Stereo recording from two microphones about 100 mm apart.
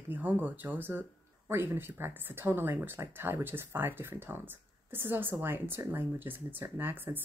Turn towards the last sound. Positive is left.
turn(degrees=-20)  # may be behind; listen again after turning